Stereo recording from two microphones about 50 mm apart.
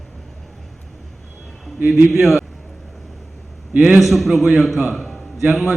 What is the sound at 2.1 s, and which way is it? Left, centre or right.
Speech, centre.